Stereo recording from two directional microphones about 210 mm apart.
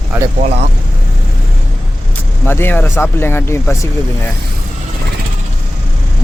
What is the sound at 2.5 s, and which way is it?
Speech, 10° left (ahead or behind).